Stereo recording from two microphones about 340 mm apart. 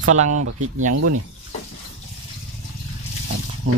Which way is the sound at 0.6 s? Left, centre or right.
Right.